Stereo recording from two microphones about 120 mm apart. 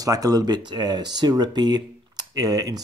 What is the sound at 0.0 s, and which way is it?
Speech, 30° right (ahead or behind).